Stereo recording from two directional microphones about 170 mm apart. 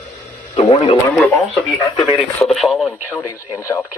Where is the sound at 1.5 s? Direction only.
Centre (ahead or behind).